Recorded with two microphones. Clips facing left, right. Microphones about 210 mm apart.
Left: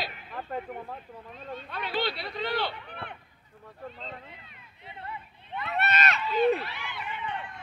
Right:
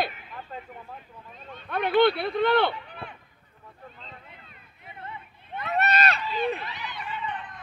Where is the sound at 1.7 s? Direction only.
55° right (ahead or behind).